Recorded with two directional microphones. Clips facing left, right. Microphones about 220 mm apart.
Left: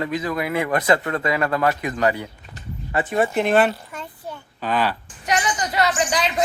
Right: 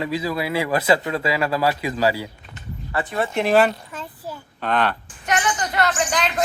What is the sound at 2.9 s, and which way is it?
Speech, 20° left (ahead or behind).